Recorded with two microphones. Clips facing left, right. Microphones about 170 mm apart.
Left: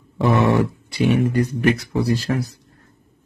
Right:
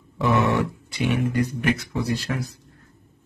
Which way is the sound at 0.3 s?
30° left (ahead or behind).